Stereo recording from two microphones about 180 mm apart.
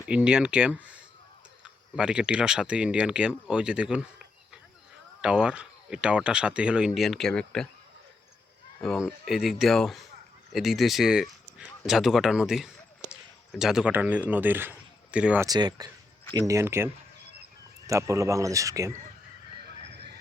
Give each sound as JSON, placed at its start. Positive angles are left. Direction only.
{"t": 0.1, "sound": "speech", "side_deg": -5}
{"t": 5.2, "sound": "speech", "side_deg": -5}
{"t": 8.8, "sound": "a man's voice", "side_deg": 0}
{"t": 15.4, "sound": "speech", "side_deg": -20}
{"t": 19.6, "sound": "horse", "side_deg": -65}